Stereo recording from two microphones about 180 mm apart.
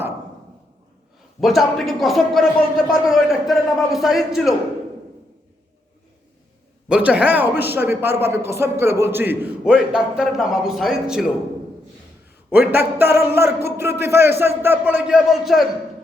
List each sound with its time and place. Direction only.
1.4 s a man's voice: centre (ahead or behind)
6.8 s speech: 5° right (ahead or behind)
12.5 s speech: 10° right (ahead or behind)